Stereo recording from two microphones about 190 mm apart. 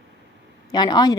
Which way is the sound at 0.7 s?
20° left (ahead or behind).